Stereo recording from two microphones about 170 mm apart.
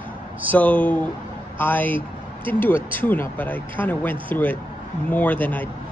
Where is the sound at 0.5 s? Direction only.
10° left (ahead or behind).